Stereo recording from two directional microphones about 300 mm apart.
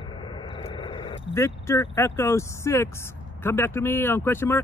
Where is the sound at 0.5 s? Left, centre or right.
Centre.